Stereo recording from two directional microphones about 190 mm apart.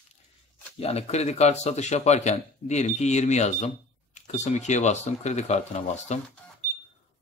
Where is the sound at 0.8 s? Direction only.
35° left (ahead or behind).